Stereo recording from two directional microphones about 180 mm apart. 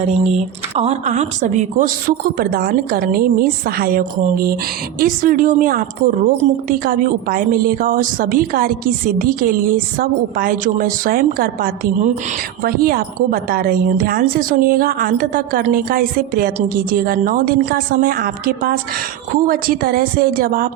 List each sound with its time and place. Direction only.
0.0 s a woman's voice: 35° right (ahead or behind); by 20.7 s 55° right (ahead or behind)